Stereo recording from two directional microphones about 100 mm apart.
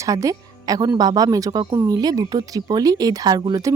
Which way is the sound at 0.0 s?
35° right (ahead or behind).